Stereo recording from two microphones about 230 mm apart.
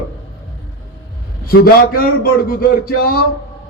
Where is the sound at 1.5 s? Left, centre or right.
Left.